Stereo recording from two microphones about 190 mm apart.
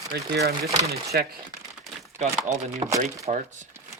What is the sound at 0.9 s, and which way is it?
Speech, 55° right (ahead or behind).